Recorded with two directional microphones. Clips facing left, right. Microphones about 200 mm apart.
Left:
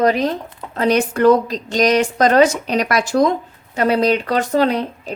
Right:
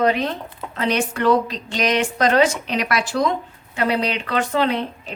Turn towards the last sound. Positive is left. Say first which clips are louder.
# left 4 dB
turn(degrees=40)  # may be behind; listen again after turning